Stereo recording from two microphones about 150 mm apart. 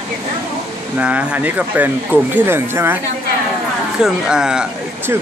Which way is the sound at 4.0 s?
5° right (ahead or behind).